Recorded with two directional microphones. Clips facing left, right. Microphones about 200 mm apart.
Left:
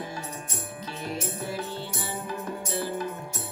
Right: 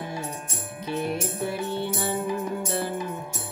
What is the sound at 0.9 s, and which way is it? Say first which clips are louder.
Music: right 7 dB; 60° right (ahead or behind).